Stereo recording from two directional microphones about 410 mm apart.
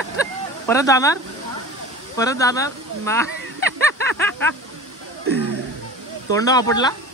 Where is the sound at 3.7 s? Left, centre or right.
Right.